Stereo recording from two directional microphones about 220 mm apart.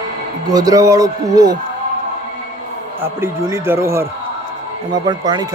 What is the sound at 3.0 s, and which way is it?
Speech, 10° right (ahead or behind).